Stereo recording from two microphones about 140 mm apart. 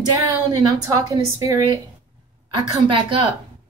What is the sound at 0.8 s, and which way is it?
Speech, 25° right (ahead or behind).